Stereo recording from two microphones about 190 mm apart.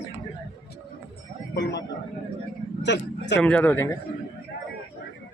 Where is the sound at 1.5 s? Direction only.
65° left (ahead or behind).